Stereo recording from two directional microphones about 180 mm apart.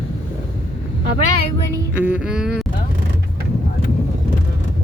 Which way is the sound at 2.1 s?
5° right (ahead or behind).